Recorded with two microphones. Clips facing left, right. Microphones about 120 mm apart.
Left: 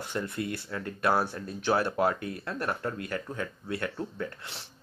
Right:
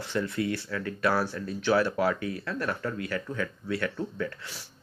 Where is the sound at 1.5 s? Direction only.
50° left (ahead or behind).